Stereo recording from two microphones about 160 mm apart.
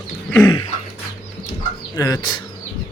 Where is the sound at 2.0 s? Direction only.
25° left (ahead or behind).